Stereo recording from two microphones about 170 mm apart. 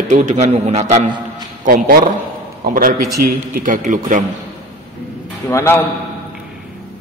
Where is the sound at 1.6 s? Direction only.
60° right (ahead or behind).